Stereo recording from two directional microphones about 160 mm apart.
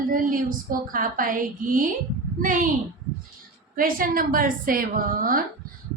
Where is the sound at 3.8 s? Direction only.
60° right (ahead or behind).